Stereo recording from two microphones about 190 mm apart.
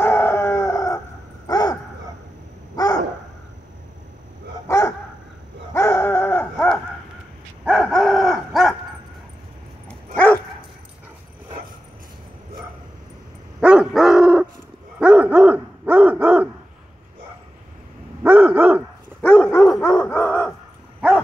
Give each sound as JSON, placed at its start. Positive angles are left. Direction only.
{"t": 0.0, "sound": "howl", "side_deg": 10}
{"t": 1.5, "sound": "a sound", "side_deg": 20}
{"t": 4.6, "sound": "dog", "side_deg": 15}
{"t": 10.1, "sound": "dog", "side_deg": 5}
{"t": 13.6, "sound": "dog", "side_deg": -5}
{"t": 18.2, "sound": "dog", "side_deg": -10}
{"t": 19.2, "sound": "dog", "side_deg": 5}